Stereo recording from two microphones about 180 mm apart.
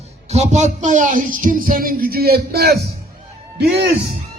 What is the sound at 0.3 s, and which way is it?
Speech, 40° right (ahead or behind).